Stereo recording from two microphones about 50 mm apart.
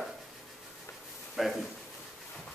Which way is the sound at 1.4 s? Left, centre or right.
Centre.